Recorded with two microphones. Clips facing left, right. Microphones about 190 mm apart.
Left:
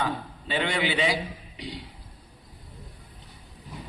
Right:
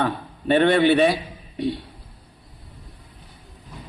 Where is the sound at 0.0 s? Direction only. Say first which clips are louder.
Right 5 dB; 60° right (ahead or behind).